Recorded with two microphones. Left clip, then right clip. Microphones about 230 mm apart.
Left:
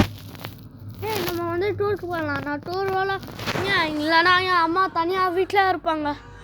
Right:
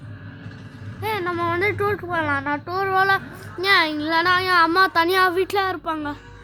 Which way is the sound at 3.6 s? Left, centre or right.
Centre.